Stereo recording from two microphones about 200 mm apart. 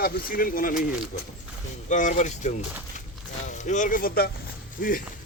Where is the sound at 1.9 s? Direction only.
40° left (ahead or behind).